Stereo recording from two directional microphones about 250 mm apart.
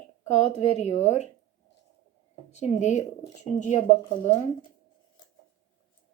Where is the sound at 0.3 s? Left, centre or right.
Left.